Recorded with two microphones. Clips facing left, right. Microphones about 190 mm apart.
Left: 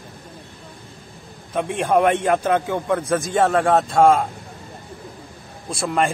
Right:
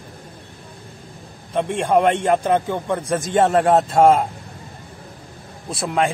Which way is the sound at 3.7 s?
25° right (ahead or behind).